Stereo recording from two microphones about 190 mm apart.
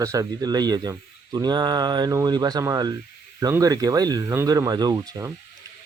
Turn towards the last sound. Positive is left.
turn(degrees=-20)  # may be behind; listen again after turning